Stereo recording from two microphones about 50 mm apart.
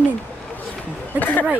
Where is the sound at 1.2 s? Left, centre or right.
Left.